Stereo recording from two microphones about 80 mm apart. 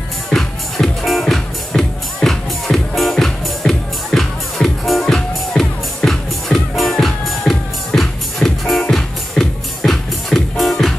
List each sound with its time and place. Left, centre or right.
0.3 s music: centre